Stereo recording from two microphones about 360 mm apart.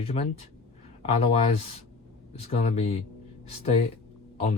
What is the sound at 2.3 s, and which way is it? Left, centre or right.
Speech, centre.